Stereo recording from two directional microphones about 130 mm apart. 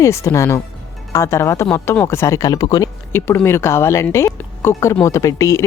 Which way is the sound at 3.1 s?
20° left (ahead or behind).